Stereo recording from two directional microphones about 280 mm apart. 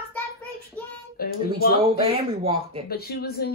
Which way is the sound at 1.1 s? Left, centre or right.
Left.